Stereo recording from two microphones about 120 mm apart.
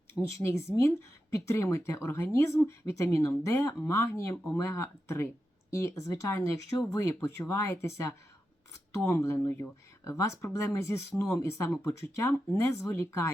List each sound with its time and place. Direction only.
0.1 s speech: 25° left (ahead or behind)